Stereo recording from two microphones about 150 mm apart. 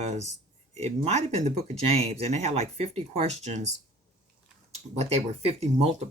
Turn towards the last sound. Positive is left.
turn(degrees=-45)  # may be behind; listen again after turning